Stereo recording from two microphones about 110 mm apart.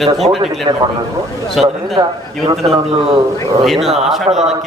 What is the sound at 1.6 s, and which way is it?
Speech, centre (ahead or behind).